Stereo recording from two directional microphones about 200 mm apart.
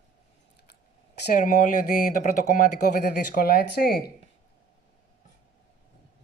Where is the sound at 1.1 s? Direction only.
40° left (ahead or behind).